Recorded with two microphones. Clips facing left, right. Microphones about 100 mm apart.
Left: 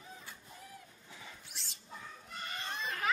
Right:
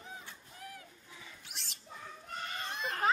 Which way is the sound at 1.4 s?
65° right (ahead or behind).